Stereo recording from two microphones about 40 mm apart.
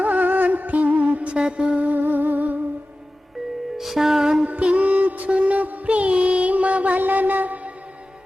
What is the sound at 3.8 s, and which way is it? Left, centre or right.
Music, centre.